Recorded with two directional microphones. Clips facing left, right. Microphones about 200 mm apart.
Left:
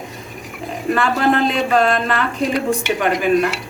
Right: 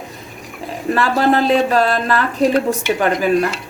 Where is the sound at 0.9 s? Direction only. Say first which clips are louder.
Right 2 dB; 35° right (ahead or behind).